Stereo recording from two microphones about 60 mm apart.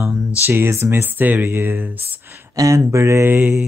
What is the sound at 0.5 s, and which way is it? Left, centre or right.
Speech, right.